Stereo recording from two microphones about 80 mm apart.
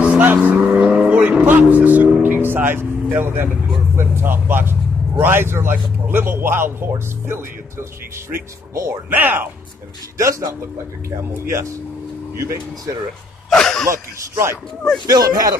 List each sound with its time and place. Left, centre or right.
0.0 s vehicle: centre
2.2 s music: right
3.9 s a man's voice: right
9.1 s a man's voice: right
10.1 s speech: right
13.5 s a sound: centre
13.8 s speech: right
15.0 s speech: right